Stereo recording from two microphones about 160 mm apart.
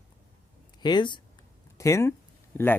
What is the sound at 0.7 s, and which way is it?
A man's voice, 25° left (ahead or behind).